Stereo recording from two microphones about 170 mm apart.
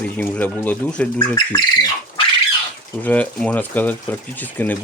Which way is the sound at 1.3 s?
25° left (ahead or behind).